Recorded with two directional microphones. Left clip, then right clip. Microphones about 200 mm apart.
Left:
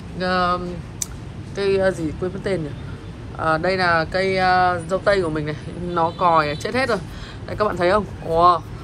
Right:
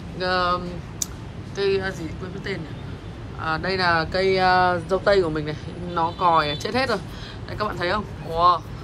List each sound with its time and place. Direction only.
0.2 s speech: 20° right (ahead or behind)